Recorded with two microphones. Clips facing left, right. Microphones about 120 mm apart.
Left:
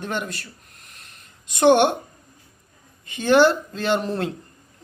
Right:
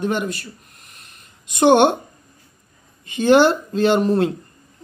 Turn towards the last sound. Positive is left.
turn(degrees=-20)  # may be behind; listen again after turning